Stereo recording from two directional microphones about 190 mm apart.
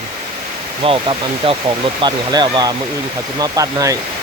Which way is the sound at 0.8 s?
30° right (ahead or behind).